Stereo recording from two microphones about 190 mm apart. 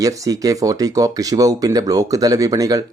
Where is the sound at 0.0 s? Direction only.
15° right (ahead or behind).